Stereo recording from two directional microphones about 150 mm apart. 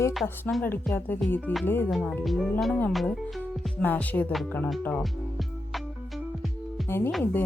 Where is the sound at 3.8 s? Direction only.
10° left (ahead or behind).